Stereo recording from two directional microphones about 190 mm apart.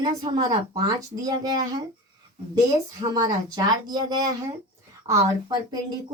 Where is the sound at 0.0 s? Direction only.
25° right (ahead or behind).